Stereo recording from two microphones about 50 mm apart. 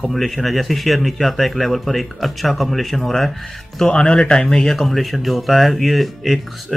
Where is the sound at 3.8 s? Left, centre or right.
Centre.